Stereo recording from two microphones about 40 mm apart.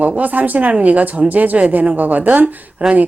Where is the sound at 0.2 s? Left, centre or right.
Right.